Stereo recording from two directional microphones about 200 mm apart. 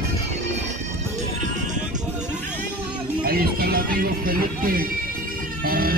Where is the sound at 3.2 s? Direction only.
50° right (ahead or behind).